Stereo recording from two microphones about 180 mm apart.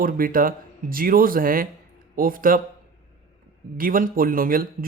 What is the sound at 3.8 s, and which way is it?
A man's voice, 50° right (ahead or behind).